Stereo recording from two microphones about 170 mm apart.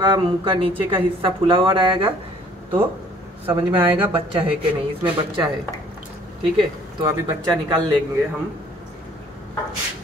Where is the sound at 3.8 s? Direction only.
10° right (ahead or behind).